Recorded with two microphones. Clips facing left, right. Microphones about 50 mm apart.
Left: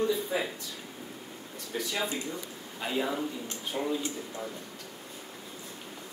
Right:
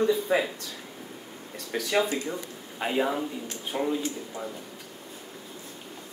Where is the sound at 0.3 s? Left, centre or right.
Right.